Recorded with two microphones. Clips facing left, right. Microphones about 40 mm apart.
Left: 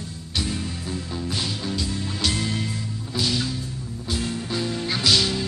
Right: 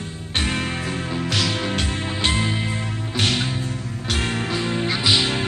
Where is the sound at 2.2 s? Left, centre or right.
Right.